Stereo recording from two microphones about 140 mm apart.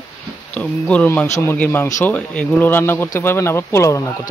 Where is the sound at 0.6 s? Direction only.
10° left (ahead or behind).